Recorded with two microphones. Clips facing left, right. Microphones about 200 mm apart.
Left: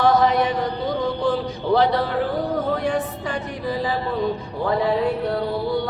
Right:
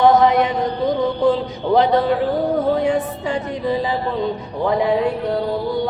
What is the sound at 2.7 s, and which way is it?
Music, 25° right (ahead or behind).